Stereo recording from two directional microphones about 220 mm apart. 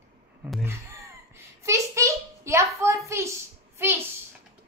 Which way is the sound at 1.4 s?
15° right (ahead or behind).